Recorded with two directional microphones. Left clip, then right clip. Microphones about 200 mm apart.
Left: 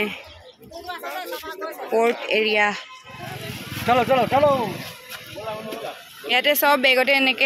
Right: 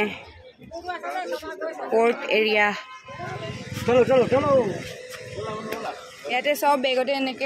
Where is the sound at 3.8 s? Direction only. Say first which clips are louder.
Even; 30° left (ahead or behind).